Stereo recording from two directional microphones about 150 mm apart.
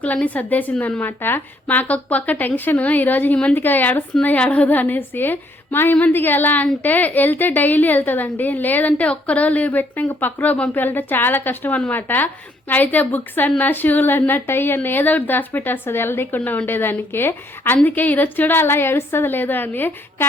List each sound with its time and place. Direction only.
0.0 s a woman's voice: 10° left (ahead or behind)